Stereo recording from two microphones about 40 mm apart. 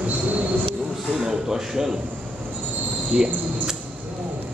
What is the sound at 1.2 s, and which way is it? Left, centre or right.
Speech, centre.